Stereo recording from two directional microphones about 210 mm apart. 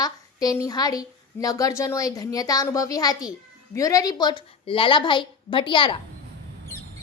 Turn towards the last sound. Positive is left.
turn(degrees=25)  # may be behind; listen again after turning